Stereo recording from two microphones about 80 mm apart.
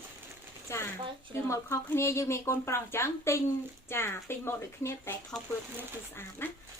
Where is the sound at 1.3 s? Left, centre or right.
Left.